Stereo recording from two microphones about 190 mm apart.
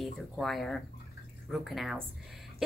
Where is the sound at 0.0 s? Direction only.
Centre (ahead or behind).